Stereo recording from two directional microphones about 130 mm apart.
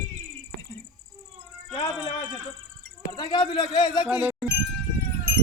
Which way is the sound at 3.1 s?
35° left (ahead or behind).